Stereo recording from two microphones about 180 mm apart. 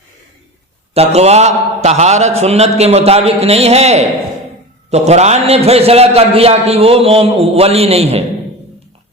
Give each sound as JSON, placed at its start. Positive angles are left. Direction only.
{"t": 0.9, "sound": "a man's voice", "side_deg": -35}